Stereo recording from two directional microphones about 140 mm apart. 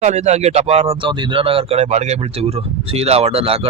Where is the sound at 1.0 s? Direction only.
35° right (ahead or behind).